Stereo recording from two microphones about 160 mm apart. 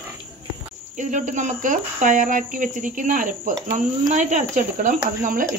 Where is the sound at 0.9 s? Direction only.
50° right (ahead or behind).